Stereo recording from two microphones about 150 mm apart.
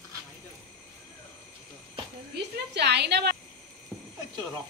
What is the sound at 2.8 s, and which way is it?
Speech, 90° right.